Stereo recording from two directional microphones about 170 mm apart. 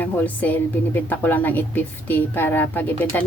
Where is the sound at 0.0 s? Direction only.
10° left (ahead or behind).